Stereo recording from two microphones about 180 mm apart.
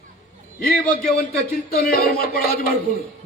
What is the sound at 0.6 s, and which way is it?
A man's voice, 55° left (ahead or behind).